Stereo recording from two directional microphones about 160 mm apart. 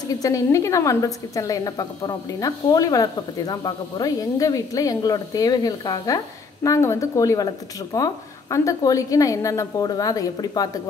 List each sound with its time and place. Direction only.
0.2 s a woman's voice: 20° left (ahead or behind)